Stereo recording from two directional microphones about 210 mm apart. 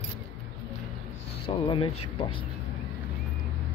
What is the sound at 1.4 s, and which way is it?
Speech, 25° left (ahead or behind).